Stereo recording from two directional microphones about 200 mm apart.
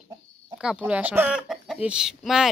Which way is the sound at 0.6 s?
5° right (ahead or behind).